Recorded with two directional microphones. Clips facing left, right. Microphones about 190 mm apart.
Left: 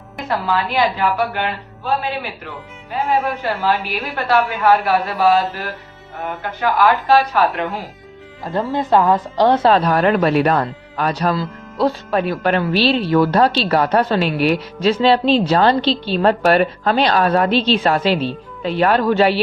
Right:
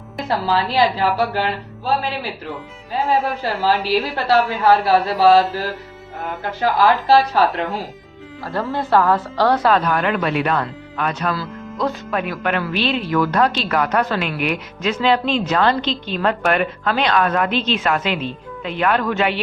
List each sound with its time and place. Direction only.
0.3 s a woman's voice: 30° right (ahead or behind)
7.1 s a woman's voice: 30° right (ahead or behind)
8.4 s speech: 20° left (ahead or behind); by 19.4 s 35° left (ahead or behind)